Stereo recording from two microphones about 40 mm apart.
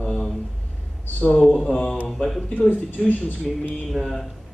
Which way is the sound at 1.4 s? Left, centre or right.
Centre.